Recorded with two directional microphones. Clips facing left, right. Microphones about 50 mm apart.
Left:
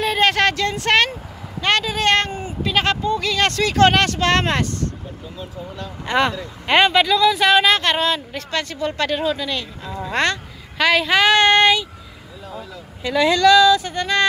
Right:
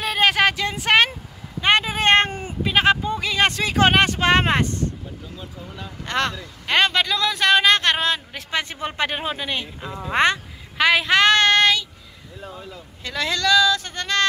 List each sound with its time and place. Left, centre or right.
0.0 s a sound: centre
1.6 s speech: centre
2.6 s a woman's voice: centre
6.0 s a woman's voice: centre
11.3 s child singing: centre
13.0 s speech: centre